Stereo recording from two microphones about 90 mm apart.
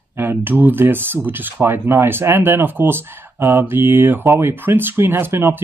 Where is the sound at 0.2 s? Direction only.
20° right (ahead or behind).